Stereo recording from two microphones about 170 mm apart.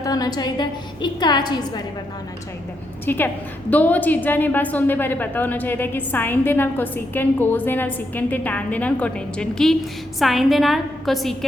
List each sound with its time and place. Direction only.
0.0 s a woman's voice: 20° left (ahead or behind)
3.1 s a woman's voice: 10° left (ahead or behind)